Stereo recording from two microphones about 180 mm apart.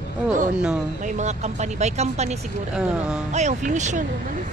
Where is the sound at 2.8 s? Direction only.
5° right (ahead or behind).